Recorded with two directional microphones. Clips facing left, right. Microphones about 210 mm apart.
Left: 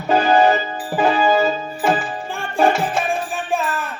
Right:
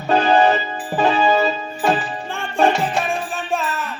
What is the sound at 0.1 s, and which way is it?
Music, 10° left (ahead or behind).